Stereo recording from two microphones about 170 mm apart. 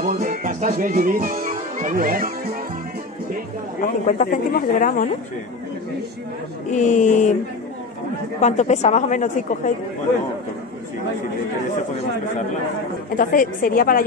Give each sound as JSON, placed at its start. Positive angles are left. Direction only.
{"t": 0.0, "sound": "speech", "side_deg": -50}
{"t": 3.8, "sound": "speech", "side_deg": 50}
{"t": 6.7, "sound": "speech", "side_deg": 45}
{"t": 8.4, "sound": "speech", "side_deg": 45}
{"t": 13.1, "sound": "speech", "side_deg": 55}